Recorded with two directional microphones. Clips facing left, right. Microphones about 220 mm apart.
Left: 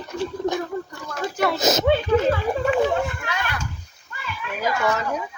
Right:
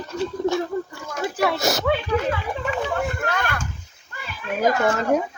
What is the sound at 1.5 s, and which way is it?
Speech, 20° left (ahead or behind).